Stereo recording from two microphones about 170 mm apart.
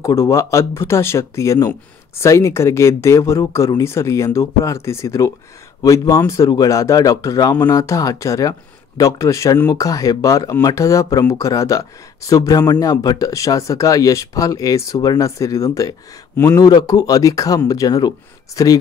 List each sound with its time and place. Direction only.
0.0 s speech: 20° left (ahead or behind)